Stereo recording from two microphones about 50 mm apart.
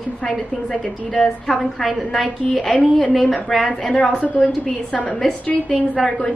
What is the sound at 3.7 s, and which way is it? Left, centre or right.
A woman's voice, centre.